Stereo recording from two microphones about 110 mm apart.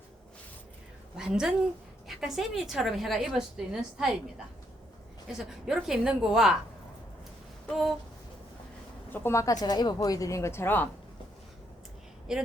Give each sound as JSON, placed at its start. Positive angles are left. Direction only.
{"t": 1.1, "sound": "a woman's voice", "side_deg": -5}
{"t": 5.4, "sound": "a woman's voice", "side_deg": -5}
{"t": 9.0, "sound": "speech", "side_deg": 20}
{"t": 12.3, "sound": "a woman's voice", "side_deg": -5}